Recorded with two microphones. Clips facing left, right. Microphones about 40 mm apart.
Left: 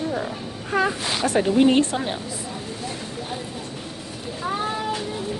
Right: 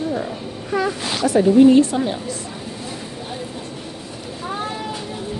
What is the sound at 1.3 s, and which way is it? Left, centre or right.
Speech, left.